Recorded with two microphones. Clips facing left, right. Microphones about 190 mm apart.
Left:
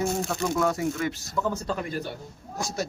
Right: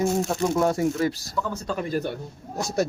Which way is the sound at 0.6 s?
30° right (ahead or behind).